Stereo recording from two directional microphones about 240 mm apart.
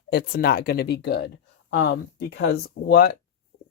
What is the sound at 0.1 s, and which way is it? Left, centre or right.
Speech, left.